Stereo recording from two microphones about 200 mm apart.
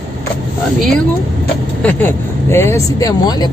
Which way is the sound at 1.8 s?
10° left (ahead or behind).